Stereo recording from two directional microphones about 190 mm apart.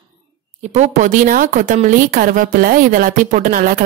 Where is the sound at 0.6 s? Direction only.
35° right (ahead or behind).